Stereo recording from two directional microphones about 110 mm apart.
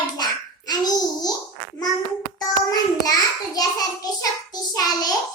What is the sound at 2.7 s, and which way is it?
Child singing, 35° left (ahead or behind).